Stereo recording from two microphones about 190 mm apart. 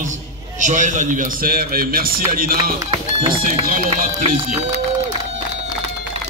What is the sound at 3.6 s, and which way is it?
Speech, 50° right (ahead or behind).